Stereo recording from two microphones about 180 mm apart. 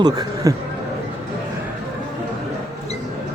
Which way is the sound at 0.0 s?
20° right (ahead or behind).